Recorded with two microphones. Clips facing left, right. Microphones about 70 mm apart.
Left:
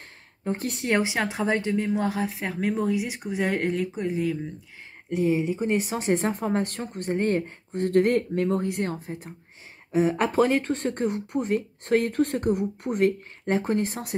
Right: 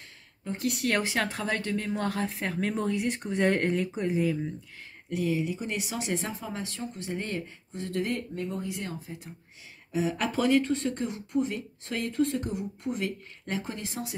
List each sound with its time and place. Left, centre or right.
0.4 s speech: left; by 4.4 s centre
5.1 s speech: left